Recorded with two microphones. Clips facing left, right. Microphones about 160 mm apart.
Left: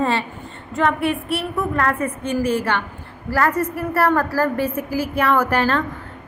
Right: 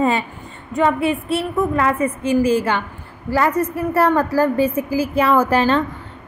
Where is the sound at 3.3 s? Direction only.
15° right (ahead or behind).